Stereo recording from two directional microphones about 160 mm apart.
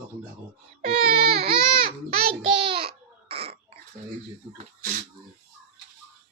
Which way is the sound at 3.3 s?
40° right (ahead or behind).